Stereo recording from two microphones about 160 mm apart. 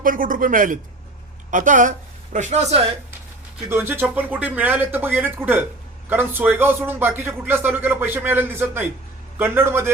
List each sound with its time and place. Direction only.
0.0 s speech: 60° right (ahead or behind); by 2.9 s 40° right (ahead or behind)
3.7 s a man's voice: 15° right (ahead or behind)